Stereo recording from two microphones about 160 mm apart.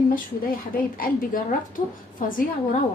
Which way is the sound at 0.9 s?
65° left (ahead or behind).